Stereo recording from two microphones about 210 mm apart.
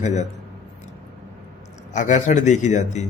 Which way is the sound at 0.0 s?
35° left (ahead or behind).